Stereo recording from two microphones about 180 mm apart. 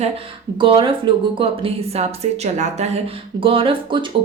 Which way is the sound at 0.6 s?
25° right (ahead or behind).